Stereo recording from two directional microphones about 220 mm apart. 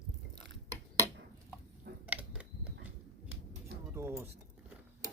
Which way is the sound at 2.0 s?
5° right (ahead or behind).